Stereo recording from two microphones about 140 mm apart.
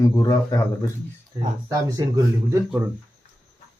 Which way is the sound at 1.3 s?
25° right (ahead or behind).